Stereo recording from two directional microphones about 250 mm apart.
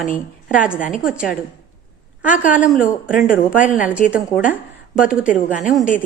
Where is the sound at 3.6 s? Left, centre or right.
Left.